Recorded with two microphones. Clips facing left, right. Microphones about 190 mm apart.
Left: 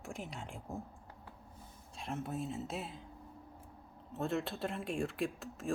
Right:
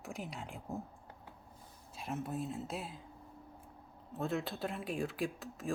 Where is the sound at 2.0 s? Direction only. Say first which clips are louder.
Even; centre (ahead or behind).